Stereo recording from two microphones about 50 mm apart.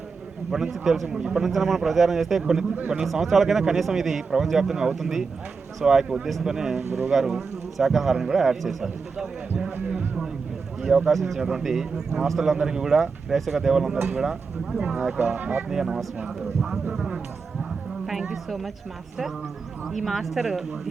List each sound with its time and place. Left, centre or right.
0.5 s a man's voice: centre
10.8 s a man's voice: centre
11.1 s speech: centre
11.3 s a man's voice: centre
15.4 s speech: right
15.7 s a man's voice: centre
17.6 s a sound: centre
18.4 s speech: centre
19.8 s speech: centre